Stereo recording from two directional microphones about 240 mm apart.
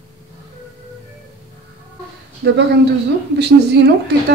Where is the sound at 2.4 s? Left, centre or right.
Right.